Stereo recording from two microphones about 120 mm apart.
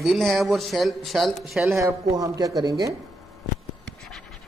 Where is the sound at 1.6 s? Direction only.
25° right (ahead or behind).